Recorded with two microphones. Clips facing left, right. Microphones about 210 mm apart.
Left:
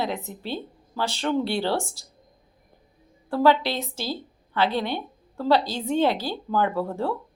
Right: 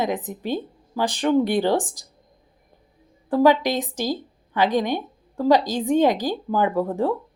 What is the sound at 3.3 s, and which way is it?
A woman's voice, 15° right (ahead or behind).